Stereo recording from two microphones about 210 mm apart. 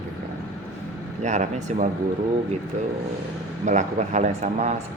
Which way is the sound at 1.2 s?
35° right (ahead or behind).